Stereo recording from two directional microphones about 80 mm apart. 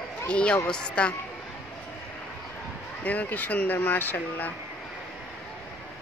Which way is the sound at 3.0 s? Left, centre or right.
Centre.